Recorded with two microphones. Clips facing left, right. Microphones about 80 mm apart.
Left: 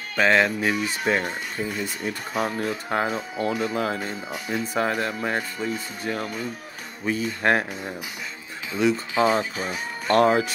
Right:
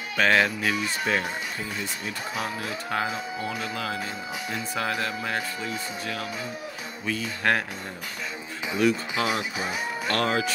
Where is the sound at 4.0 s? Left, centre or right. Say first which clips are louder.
Left 1 dB; centre.